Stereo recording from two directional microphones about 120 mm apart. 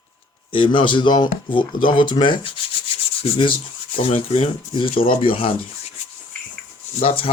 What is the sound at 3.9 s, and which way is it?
Speech, 55° left (ahead or behind).